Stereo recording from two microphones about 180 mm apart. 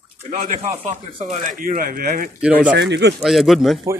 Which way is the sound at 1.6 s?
50° right (ahead or behind).